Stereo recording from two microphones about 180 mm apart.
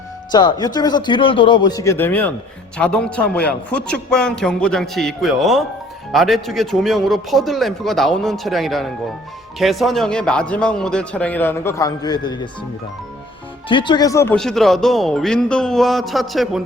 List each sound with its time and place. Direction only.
0.3 s a man's voice: 25° left (ahead or behind)
13.7 s speech: 25° left (ahead or behind)
14.3 s a man's voice: centre (ahead or behind)